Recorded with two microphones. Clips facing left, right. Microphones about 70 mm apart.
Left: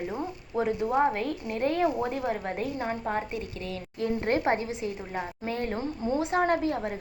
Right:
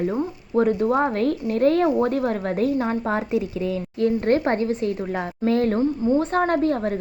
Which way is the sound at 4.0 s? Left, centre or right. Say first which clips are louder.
Right 7 dB; centre.